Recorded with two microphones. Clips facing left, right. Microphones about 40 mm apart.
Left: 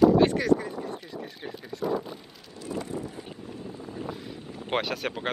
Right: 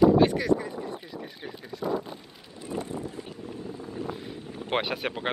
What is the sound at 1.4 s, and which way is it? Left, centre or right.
Speech, centre.